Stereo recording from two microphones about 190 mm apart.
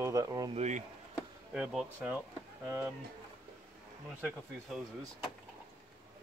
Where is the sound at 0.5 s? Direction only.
35° right (ahead or behind).